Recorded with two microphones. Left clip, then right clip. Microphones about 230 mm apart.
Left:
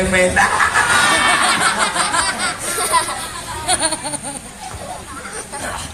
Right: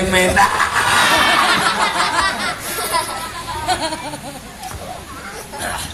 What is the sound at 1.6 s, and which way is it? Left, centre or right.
Snicker, left.